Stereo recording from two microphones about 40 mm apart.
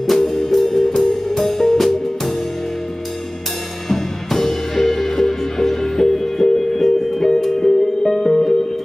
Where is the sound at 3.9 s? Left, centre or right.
Centre.